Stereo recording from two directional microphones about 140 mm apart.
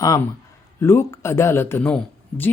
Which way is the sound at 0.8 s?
20° left (ahead or behind).